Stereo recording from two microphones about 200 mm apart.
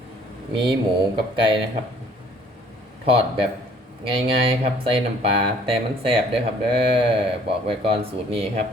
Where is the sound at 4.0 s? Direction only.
25° right (ahead or behind).